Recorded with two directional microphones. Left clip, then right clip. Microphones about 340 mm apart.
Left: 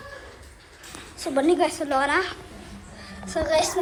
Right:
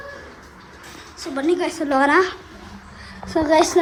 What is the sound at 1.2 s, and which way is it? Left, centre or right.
A child's voice, centre.